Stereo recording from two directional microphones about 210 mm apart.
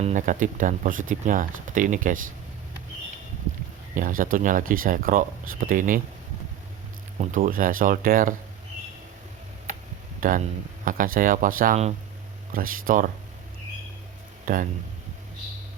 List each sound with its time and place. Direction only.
0.0 s speech: 35° right (ahead or behind)
3.9 s speech: 40° right (ahead or behind)
7.2 s speech: 40° right (ahead or behind)
10.2 s speech: 40° right (ahead or behind)
14.4 s speech: 40° right (ahead or behind)